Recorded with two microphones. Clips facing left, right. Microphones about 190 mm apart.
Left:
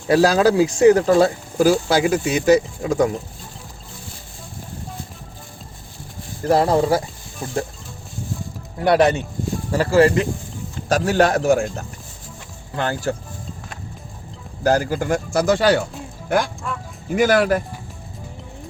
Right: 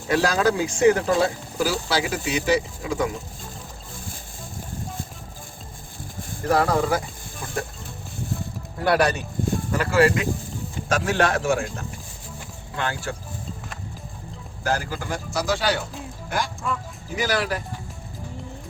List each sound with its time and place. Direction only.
0.1 s speech: 35° left (ahead or behind)
6.4 s speech: 30° left (ahead or behind)
8.8 s speech: 20° left (ahead or behind); by 11.6 s 40° left (ahead or behind)
12.7 s speech: 40° left (ahead or behind)
14.6 s a man's voice: 40° left (ahead or behind)
16.7 s speech: centre (ahead or behind)
17.2 s a man's voice: 50° left (ahead or behind)